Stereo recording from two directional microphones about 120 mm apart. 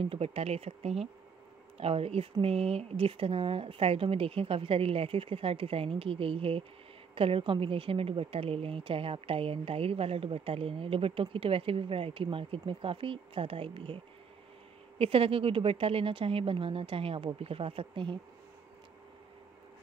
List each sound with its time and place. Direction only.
0.0 s a woman's voice: 55° right (ahead or behind)